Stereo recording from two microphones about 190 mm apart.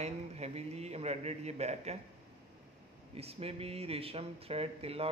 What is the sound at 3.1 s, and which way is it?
Speech, 30° right (ahead or behind).